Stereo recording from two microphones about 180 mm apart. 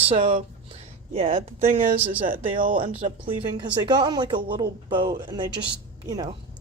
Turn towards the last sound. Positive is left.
turn(degrees=-20)  # may be behind; listen again after turning